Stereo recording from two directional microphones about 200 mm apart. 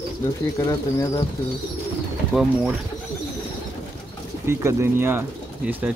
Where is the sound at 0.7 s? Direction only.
15° left (ahead or behind).